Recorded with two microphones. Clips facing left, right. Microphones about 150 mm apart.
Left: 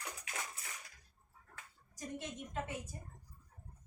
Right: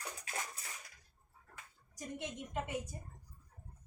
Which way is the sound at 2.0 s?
15° right (ahead or behind).